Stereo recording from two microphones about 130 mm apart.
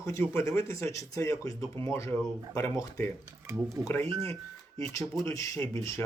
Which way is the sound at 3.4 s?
20° right (ahead or behind).